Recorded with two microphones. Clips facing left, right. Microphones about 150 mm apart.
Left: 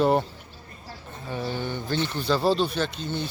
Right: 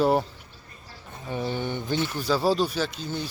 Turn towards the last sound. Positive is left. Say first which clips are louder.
# left 1 dB
turn(degrees=-5)  # may be behind; listen again after turning